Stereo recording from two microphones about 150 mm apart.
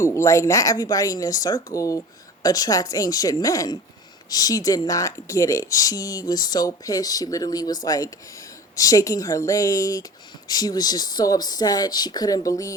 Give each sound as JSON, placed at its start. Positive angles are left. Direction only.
{"t": 0.0, "sound": "speech", "side_deg": 20}